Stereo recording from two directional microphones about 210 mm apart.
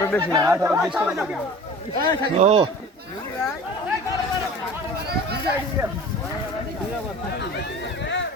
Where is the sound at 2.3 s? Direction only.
30° right (ahead or behind).